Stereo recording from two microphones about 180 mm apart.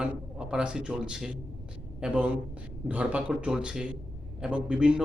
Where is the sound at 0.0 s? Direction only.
5° right (ahead or behind).